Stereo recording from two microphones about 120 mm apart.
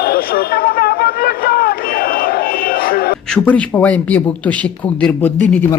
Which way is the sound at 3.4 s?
15° left (ahead or behind).